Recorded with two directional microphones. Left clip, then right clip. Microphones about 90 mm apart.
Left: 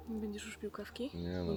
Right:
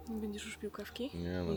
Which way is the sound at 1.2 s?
45° right (ahead or behind).